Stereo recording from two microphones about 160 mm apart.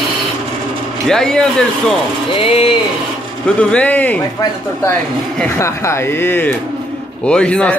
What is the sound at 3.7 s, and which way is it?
Speech, 10° left (ahead or behind).